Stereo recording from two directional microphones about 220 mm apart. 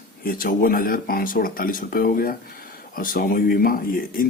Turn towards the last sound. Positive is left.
turn(degrees=40)  # may be behind; listen again after turning